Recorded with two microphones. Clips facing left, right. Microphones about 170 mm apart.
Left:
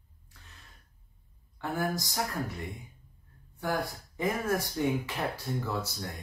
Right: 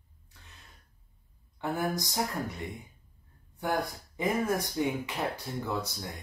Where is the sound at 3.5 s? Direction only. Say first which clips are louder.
Right 1 dB; 20° right (ahead or behind).